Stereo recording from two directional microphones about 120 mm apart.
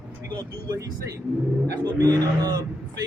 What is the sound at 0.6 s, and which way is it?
A man's voice, 25° right (ahead or behind).